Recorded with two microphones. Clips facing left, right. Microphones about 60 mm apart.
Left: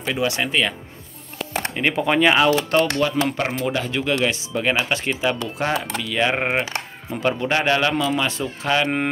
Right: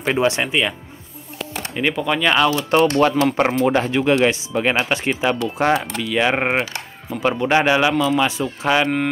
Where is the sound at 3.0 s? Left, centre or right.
Right.